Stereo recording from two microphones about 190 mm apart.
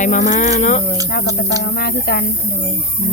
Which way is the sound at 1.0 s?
55° left (ahead or behind).